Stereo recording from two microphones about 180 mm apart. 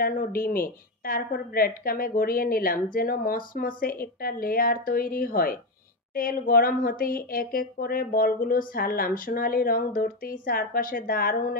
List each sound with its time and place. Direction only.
0.0 s a woman's voice: 50° left (ahead or behind)